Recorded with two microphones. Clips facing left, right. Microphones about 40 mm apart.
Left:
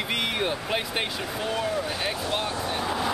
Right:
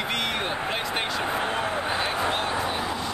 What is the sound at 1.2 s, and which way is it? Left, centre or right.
Speech, right.